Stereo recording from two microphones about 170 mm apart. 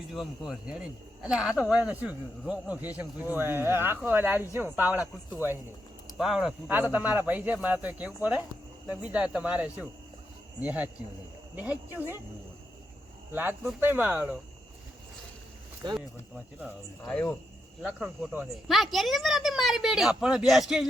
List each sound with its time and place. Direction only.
0.0 s speech: centre (ahead or behind)
6.1 s speech: centre (ahead or behind)
11.9 s speech: 15° right (ahead or behind)
13.3 s speech: 10° right (ahead or behind)
15.8 s speech: 30° right (ahead or behind)
16.3 s speech: 10° right (ahead or behind)
17.1 s speech: 5° left (ahead or behind)